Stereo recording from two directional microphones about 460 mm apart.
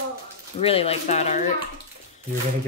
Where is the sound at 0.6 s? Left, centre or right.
Centre.